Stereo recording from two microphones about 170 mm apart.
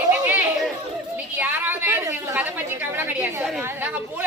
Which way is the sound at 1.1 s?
10° right (ahead or behind).